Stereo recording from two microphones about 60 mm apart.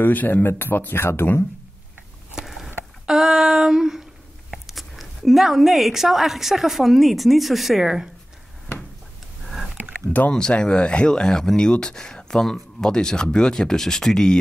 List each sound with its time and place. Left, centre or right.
0.0 s speech: left
2.3 s rowboat: centre
3.1 s female singing: centre
4.5 s speech: centre
10.3 s speech: centre